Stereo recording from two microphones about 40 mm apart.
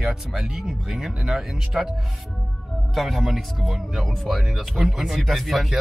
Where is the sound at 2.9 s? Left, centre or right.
Centre.